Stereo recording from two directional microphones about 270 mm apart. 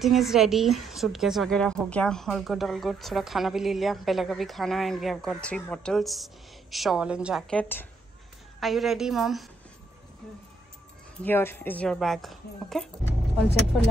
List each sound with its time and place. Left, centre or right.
0.0 s a woman's voice: centre
11.2 s a woman's voice: centre